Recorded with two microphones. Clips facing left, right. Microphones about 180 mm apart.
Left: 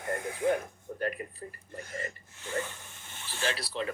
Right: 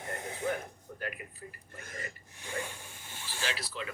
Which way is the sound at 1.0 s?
40° left (ahead or behind).